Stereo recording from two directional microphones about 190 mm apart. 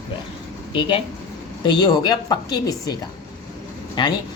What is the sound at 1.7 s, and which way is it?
Speech, 20° left (ahead or behind).